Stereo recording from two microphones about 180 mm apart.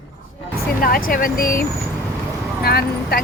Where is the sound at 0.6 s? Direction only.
55° left (ahead or behind).